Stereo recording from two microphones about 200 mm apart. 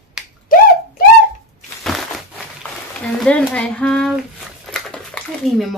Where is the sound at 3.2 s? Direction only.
5° left (ahead or behind).